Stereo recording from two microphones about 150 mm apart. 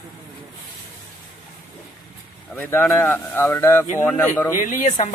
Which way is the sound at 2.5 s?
15° left (ahead or behind).